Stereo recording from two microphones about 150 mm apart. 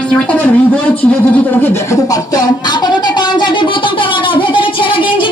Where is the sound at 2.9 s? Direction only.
30° left (ahead or behind).